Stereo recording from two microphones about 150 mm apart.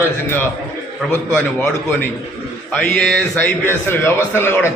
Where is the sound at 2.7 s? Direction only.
10° left (ahead or behind).